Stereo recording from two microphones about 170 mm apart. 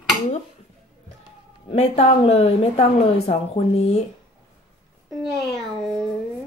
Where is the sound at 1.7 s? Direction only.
35° left (ahead or behind).